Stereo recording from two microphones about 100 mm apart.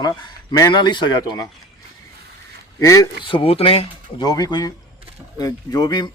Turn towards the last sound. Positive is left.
turn(degrees=45)  # may be behind; listen again after turning